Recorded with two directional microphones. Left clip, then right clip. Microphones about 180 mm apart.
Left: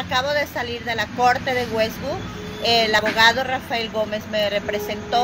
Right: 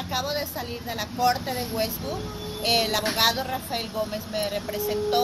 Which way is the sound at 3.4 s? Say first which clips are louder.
Left 6 dB; 20° right (ahead or behind).